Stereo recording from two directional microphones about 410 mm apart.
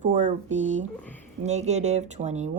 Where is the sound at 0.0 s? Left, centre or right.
Centre.